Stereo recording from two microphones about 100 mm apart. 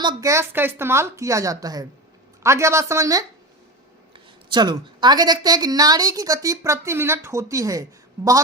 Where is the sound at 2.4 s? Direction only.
30° right (ahead or behind).